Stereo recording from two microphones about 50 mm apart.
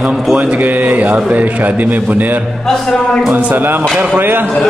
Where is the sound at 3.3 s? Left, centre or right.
Right.